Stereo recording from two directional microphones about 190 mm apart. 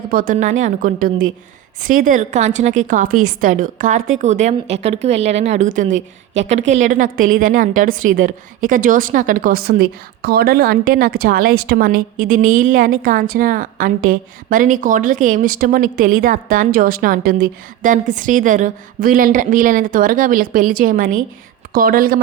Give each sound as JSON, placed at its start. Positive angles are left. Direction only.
{"t": 0.1, "sound": "a woman's voice", "side_deg": -45}